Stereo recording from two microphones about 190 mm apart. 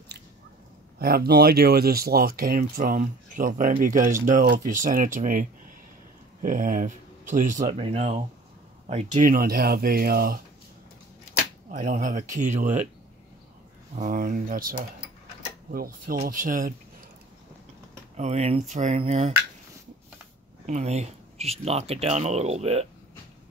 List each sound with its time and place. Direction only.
0.9 s speech: 55° right (ahead or behind)
11.7 s speech: 45° right (ahead or behind)
13.9 s speech: 45° right (ahead or behind)
18.1 s speech: 35° right (ahead or behind)
20.6 s speech: 35° right (ahead or behind)